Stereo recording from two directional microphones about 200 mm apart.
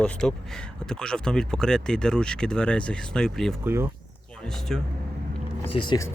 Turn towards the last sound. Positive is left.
turn(degrees=15)  # may be behind; listen again after turning